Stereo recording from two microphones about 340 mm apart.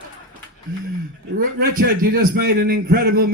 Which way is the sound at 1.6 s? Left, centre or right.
Right.